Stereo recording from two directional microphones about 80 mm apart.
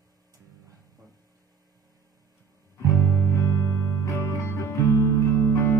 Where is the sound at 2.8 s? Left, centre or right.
Left.